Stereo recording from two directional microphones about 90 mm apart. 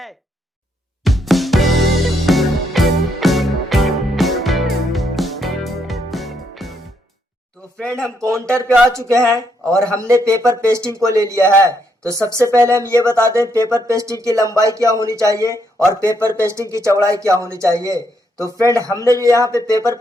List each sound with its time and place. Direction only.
1.0 s music: centre (ahead or behind)
7.8 s speech: 10° left (ahead or behind)
8.2 s speech: 30° right (ahead or behind)